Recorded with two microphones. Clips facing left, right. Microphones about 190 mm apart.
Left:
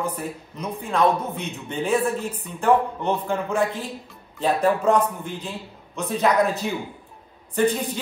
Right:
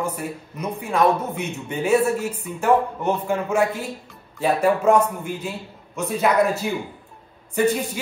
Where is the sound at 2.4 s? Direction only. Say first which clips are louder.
Even; 5° right (ahead or behind).